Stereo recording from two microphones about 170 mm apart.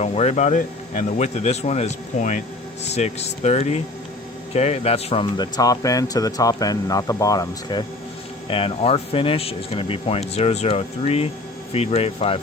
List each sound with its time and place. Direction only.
0.0 s speech: 40° left (ahead or behind)
5.4 s speech: 20° left (ahead or behind)